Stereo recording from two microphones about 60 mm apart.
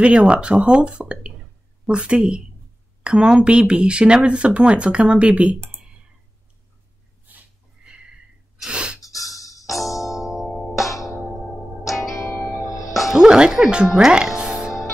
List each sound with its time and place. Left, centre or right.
0.0 s speech: centre
7.8 s a sound: centre
8.5 s gasp: centre
9.1 s music: centre
9.4 s music: left
9.7 s music: centre
10.9 s music: left
11.8 s music: centre
12.3 s music: left
12.6 s music: left
12.9 s music: centre
13.2 s speech: centre
13.9 s music: centre